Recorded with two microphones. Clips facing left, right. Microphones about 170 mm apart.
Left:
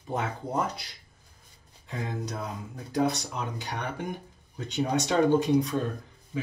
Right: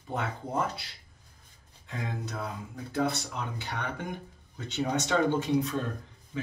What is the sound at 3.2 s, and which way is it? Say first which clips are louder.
Speech: left 2 dB; 40° left (ahead or behind).